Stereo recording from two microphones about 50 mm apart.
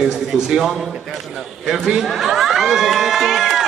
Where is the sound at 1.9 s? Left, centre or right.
Centre.